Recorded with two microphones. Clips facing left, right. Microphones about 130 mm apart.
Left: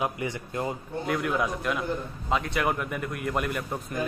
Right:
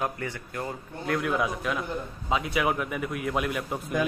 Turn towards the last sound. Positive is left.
turn(degrees=0)  # may be behind; listen again after turning